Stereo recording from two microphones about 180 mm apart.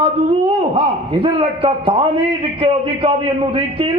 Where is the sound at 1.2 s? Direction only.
30° right (ahead or behind).